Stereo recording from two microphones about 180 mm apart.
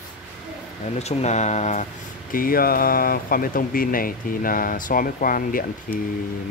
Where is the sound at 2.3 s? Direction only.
55° left (ahead or behind).